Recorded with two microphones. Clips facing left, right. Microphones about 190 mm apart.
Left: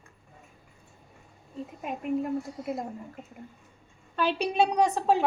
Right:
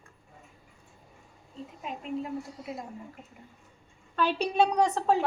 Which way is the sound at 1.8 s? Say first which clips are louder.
Left 5 dB; 55° left (ahead or behind).